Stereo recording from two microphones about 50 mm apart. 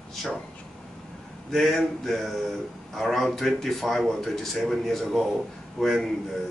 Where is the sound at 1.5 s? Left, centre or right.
Centre.